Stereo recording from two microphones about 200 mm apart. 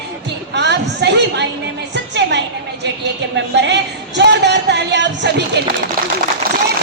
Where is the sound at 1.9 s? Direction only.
60° right (ahead or behind).